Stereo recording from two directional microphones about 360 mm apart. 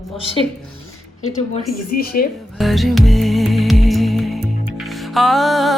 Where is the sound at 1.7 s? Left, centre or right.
Left.